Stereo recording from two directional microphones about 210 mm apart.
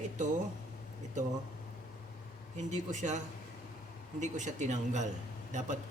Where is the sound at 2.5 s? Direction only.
35° right (ahead or behind).